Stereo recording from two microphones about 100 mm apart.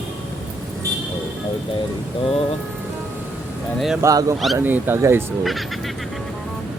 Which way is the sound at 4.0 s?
30° right (ahead or behind).